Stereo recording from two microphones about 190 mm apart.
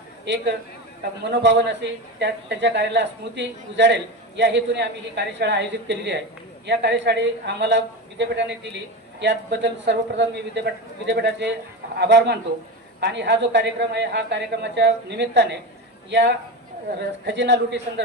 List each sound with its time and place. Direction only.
1.2 s a man's voice: 65° right (ahead or behind)